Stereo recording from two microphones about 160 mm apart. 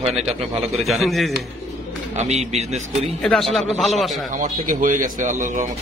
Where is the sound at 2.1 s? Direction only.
45° right (ahead or behind).